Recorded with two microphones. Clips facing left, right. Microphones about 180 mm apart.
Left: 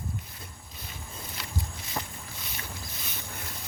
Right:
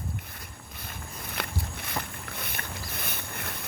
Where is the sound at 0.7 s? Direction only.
55° right (ahead or behind).